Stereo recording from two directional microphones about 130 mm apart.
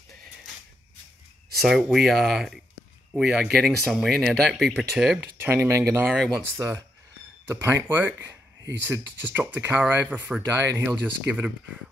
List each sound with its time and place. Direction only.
1.6 s speech: centre (ahead or behind)
5.4 s speech: 20° right (ahead or behind)